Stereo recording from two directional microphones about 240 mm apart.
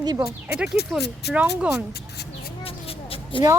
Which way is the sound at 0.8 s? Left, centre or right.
Left.